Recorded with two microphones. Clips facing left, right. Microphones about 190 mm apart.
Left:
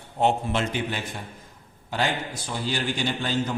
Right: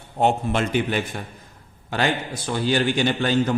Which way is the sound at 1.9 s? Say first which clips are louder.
Right 3 dB; 70° right (ahead or behind).